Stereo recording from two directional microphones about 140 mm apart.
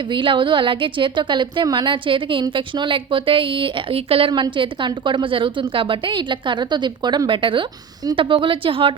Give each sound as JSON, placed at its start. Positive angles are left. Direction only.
{"t": 0.1, "sound": "a woman's voice", "side_deg": -35}